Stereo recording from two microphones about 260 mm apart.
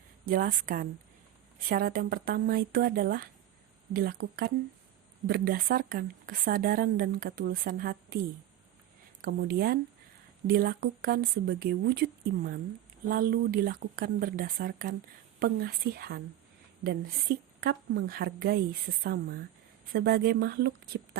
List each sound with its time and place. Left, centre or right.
0.3 s speech: right
9.2 s speech: right